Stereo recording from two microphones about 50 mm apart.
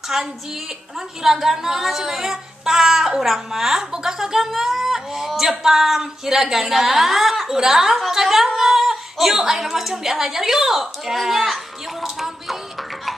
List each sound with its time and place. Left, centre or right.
0.1 s a woman's voice: centre